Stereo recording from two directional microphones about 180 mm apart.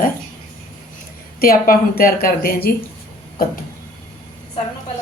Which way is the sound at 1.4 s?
55° left (ahead or behind).